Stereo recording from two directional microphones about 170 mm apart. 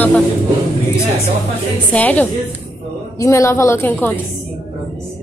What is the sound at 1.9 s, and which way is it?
A woman's voice, 10° left (ahead or behind).